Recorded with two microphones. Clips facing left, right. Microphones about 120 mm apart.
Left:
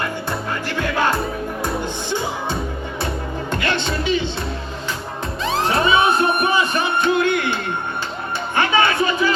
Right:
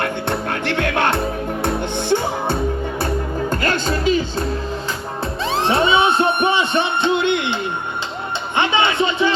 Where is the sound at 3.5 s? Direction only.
40° right (ahead or behind).